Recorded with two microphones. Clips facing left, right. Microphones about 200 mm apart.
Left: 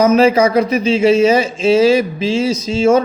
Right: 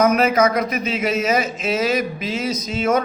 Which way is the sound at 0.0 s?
30° left (ahead or behind).